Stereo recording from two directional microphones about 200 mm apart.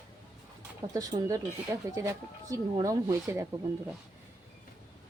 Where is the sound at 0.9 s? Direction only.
20° right (ahead or behind).